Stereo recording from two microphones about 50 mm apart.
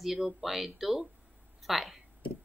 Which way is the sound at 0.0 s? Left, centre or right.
Centre.